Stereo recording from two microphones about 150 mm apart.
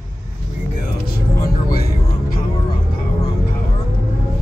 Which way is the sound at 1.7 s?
90° left.